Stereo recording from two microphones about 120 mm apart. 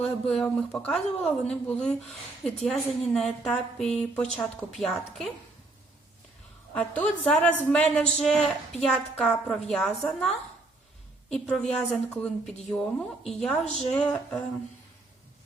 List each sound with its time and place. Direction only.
0.0 s a woman's voice: 5° left (ahead or behind)
6.7 s a woman's voice: 10° left (ahead or behind)